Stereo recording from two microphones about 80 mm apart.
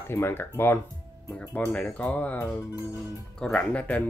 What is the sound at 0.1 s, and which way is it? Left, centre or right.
Speech, left.